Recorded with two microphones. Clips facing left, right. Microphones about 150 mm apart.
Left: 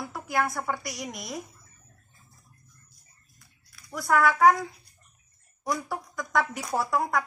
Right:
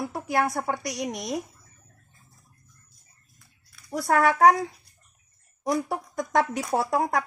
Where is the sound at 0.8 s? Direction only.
70° right (ahead or behind).